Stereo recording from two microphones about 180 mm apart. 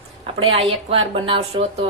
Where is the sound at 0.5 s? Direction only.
35° right (ahead or behind).